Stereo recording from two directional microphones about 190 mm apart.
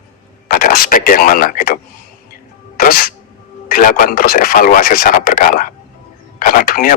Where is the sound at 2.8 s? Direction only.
50° left (ahead or behind).